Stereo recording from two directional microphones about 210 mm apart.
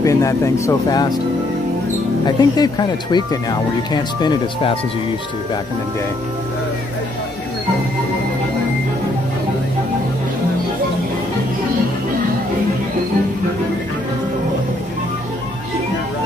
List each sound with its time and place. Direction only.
0.0 s speech: 15° left (ahead or behind)
2.2 s speech: 20° left (ahead or behind)